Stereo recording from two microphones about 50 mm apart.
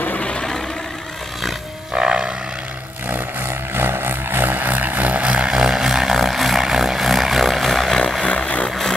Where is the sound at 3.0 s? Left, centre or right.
Right; by 7.9 s centre.